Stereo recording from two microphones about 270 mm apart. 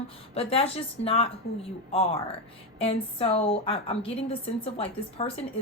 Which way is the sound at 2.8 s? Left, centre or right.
Left.